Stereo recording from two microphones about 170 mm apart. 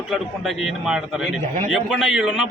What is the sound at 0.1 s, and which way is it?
A man's voice, centre (ahead or behind).